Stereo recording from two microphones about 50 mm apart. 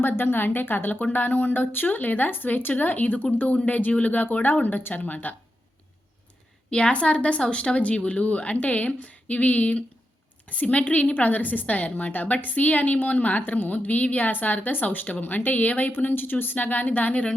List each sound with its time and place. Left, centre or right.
0.0 s a woman's voice: left
6.7 s a woman's voice: centre